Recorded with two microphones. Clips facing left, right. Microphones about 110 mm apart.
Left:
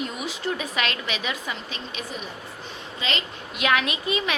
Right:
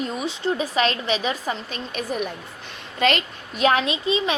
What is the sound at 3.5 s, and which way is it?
Speech, 35° right (ahead or behind).